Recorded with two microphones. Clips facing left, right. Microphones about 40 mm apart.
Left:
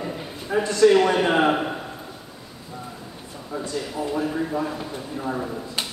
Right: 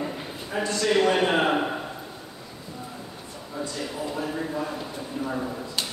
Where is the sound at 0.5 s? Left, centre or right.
Left.